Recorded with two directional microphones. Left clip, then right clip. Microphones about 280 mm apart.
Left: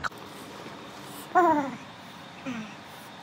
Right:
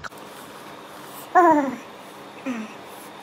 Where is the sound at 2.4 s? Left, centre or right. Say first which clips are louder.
Right 6 dB; centre.